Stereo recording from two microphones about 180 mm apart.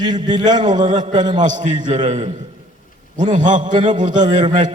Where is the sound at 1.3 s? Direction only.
45° right (ahead or behind).